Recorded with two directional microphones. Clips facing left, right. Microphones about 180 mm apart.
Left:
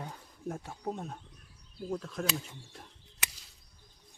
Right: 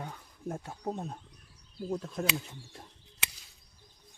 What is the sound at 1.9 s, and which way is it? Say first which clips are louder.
Speech: right 1 dB; 25° right (ahead or behind).